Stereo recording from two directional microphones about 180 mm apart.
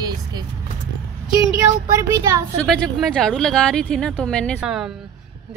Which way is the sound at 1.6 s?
15° right (ahead or behind).